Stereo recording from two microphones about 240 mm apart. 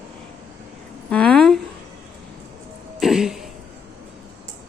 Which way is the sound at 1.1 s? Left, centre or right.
Centre.